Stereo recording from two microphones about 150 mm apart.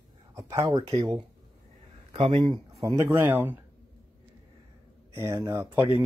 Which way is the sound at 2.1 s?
35° right (ahead or behind).